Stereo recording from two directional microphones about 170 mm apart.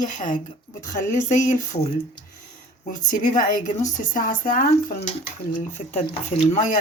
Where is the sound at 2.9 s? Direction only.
50° left (ahead or behind).